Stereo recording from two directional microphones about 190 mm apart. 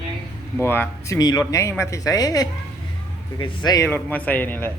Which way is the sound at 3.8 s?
10° left (ahead or behind).